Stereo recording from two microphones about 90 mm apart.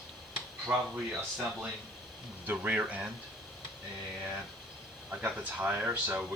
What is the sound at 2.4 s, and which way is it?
Speech, 15° right (ahead or behind).